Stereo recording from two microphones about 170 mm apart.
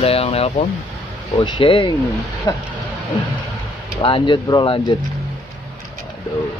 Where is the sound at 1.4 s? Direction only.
25° left (ahead or behind).